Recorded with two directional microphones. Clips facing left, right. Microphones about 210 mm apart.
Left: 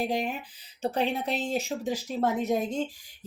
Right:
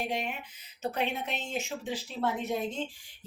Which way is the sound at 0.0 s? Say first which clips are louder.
Left 5 dB; 35° left (ahead or behind).